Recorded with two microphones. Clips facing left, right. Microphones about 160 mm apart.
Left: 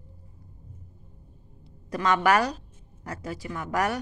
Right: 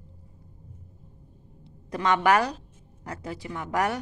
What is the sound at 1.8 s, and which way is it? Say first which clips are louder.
Speech: even; 20° right (ahead or behind).